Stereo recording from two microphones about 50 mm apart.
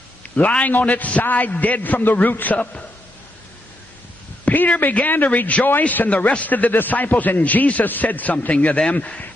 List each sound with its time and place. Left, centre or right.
0.2 s a man's voice: left
4.5 s a man's voice: left
8.5 s a man's voice: left